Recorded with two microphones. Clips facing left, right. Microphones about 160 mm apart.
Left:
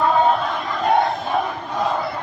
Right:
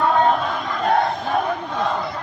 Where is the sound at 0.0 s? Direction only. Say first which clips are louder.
Even; centre (ahead or behind).